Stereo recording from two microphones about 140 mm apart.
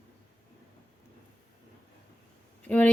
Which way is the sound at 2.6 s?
10° left (ahead or behind).